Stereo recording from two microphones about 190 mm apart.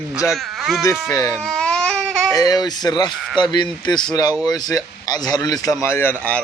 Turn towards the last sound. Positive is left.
turn(degrees=10)  # may be behind; listen again after turning